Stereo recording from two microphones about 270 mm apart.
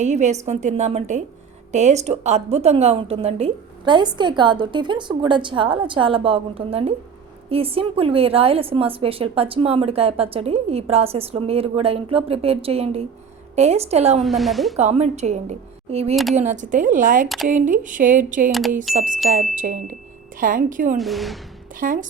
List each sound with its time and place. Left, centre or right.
0.0 s a woman's voice: right
14.2 s a woman's voice: centre
14.8 s a woman's voice: right
17.2 s a woman's voice: centre
17.5 s a woman's voice: right
21.0 s a woman's voice: centre
21.8 s speech: right